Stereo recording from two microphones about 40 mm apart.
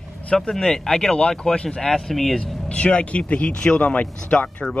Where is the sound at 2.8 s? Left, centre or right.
Left.